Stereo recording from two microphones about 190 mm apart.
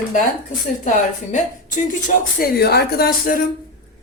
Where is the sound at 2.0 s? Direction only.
55° left (ahead or behind).